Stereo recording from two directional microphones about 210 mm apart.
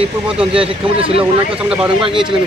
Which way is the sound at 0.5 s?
25° right (ahead or behind).